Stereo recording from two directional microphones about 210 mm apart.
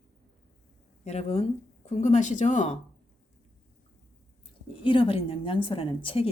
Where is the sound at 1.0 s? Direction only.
30° left (ahead or behind).